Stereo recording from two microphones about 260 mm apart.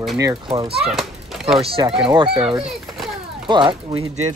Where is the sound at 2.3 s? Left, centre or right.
Centre.